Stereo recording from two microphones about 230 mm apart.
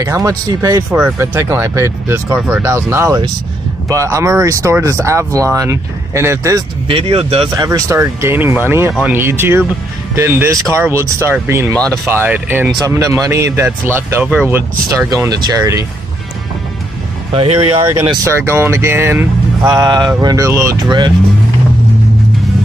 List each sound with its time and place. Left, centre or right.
0.0 s speech: centre
6.9 s speech: right
17.6 s speech: right